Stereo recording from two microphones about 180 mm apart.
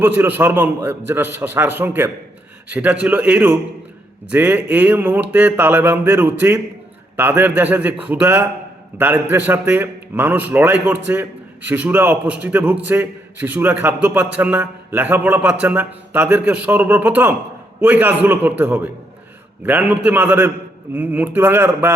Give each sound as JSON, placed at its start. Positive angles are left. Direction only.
{"t": 0.0, "sound": "a man's voice", "side_deg": -10}